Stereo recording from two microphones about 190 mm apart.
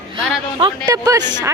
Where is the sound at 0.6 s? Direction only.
20° right (ahead or behind).